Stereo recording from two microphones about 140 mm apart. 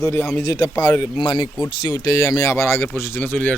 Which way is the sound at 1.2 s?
30° left (ahead or behind).